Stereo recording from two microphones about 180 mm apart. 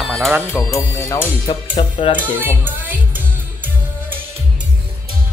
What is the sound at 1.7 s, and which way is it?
Speech, 30° left (ahead or behind).